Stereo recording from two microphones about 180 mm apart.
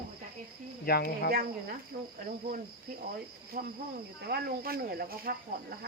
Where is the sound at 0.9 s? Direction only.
60° left (ahead or behind).